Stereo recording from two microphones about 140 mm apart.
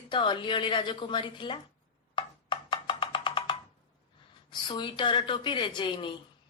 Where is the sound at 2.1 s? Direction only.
35° left (ahead or behind).